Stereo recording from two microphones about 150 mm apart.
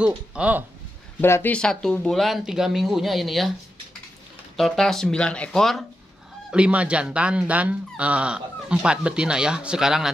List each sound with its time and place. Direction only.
0.0 s speech: 5° right (ahead or behind)
1.2 s speech: 15° left (ahead or behind)
4.6 s speech: centre (ahead or behind)